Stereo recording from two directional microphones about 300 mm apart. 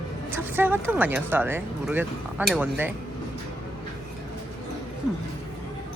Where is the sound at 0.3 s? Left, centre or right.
Centre.